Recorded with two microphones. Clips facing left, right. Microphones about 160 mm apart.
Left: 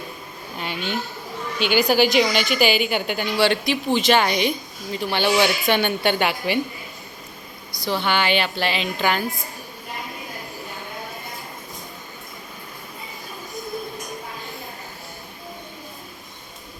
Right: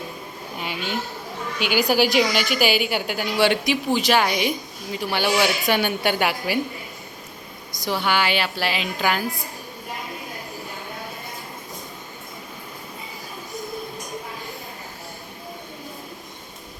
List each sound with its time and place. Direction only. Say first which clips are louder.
0.6 s a sound: left 1 dB; 10° right (ahead or behind)
1.5 s a woman's voice: left 2 dB; 5° right (ahead or behind)
7.9 s a woman's voice: left 1 dB; 10° right (ahead or behind)